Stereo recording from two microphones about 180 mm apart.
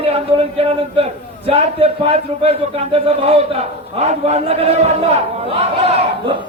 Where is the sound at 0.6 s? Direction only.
35° right (ahead or behind).